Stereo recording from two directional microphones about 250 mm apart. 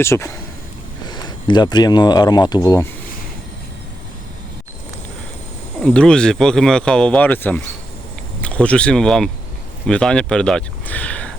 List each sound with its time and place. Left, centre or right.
0.0 s speech: centre
5.8 s speech: centre